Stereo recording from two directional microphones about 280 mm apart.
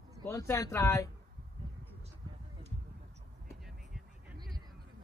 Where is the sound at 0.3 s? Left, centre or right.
Centre.